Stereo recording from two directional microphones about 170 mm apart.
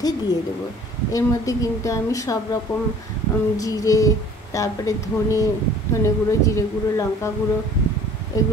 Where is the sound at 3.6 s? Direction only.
20° left (ahead or behind).